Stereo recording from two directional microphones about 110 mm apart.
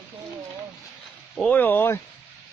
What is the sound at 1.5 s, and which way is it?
Speech, 15° left (ahead or behind).